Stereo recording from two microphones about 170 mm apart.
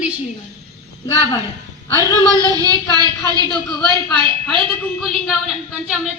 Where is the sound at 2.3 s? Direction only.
25° right (ahead or behind).